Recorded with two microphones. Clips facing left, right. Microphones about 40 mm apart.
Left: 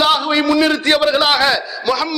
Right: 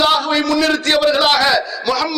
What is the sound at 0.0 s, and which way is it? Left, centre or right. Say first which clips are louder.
A man's voice: even; centre.